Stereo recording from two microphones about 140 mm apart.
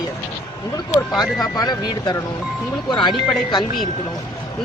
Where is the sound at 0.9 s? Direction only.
25° left (ahead or behind).